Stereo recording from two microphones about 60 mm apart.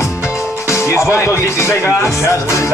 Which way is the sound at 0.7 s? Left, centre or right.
Left.